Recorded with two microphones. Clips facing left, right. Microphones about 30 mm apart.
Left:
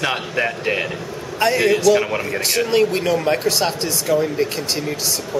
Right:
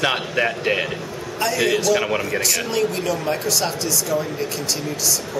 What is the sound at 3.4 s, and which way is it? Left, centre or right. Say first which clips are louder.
Speech: left 3 dB; left.